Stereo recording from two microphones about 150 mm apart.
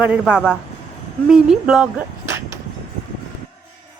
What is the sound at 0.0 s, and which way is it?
Speech, 10° right (ahead or behind).